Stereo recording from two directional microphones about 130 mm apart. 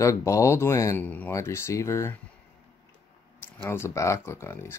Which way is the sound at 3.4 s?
20° left (ahead or behind).